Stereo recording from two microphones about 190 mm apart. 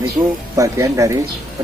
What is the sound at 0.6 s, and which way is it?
Speech, 15° right (ahead or behind).